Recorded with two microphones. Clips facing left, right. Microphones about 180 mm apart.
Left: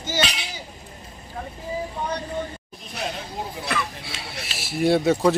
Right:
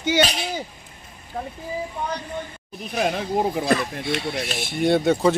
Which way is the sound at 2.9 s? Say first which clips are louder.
Right 8 dB; 65° right (ahead or behind).